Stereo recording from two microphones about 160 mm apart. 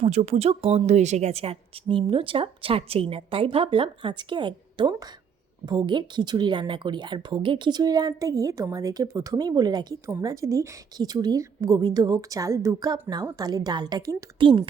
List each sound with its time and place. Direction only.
0.0 s a woman's voice: 45° right (ahead or behind)